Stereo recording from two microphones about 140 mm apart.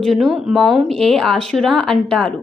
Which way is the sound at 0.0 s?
Centre (ahead or behind).